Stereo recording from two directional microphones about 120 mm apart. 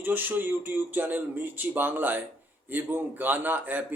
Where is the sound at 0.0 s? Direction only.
15° right (ahead or behind).